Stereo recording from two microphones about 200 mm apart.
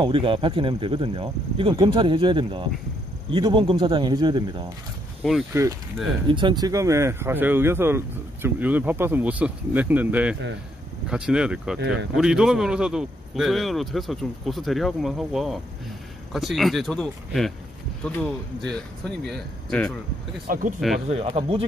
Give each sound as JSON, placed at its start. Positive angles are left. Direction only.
{"t": 0.0, "sound": "a man's voice", "side_deg": -25}
{"t": 20.4, "sound": "speech", "side_deg": -45}
{"t": 21.1, "sound": "speech", "side_deg": -30}